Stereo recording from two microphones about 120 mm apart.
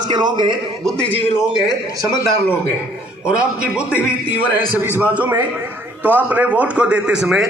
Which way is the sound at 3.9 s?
20° left (ahead or behind).